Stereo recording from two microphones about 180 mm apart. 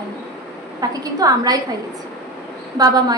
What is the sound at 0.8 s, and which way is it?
Speech, 20° right (ahead or behind).